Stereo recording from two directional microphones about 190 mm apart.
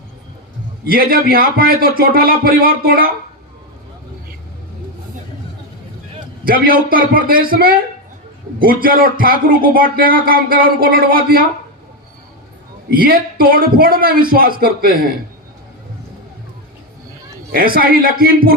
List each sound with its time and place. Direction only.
0.9 s speech: 50° right (ahead or behind)
6.4 s speech: 50° right (ahead or behind)
12.9 s speech: 50° right (ahead or behind)
17.7 s speech: 50° right (ahead or behind)